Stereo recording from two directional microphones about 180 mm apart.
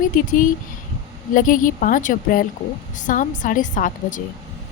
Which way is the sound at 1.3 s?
50° left (ahead or behind).